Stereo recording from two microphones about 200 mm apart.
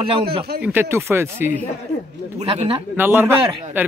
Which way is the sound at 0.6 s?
10° right (ahead or behind).